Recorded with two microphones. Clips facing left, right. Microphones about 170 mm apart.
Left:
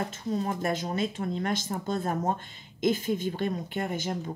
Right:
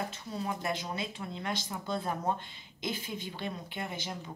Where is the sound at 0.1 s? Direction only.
45° left (ahead or behind).